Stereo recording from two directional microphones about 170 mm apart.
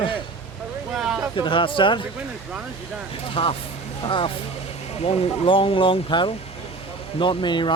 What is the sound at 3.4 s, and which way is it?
Speech, 30° left (ahead or behind).